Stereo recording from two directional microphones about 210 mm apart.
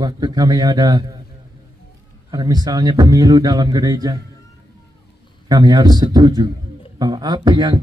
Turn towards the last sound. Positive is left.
turn(degrees=-20)  # may be behind; listen again after turning